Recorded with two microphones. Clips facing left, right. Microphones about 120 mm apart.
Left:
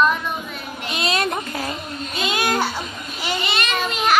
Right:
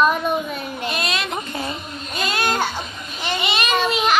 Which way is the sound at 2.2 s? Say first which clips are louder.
Even; 15° left (ahead or behind).